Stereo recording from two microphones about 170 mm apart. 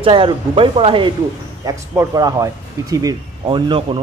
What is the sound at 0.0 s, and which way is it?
A man's voice, 30° right (ahead or behind).